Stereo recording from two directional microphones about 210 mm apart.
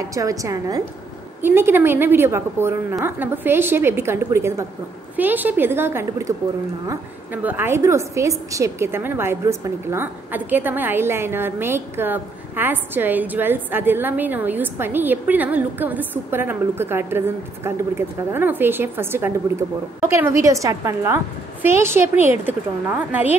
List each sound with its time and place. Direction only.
0.1 s a woman's voice: 15° right (ahead or behind)
7.4 s a woman's voice: 10° right (ahead or behind)